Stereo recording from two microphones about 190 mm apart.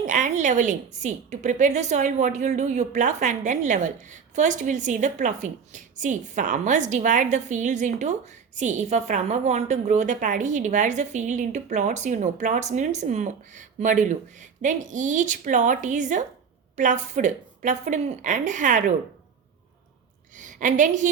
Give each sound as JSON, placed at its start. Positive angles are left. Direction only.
{"t": 0.0, "sound": "a woman's voice", "side_deg": -40}
{"t": 20.3, "sound": "a woman's voice", "side_deg": -40}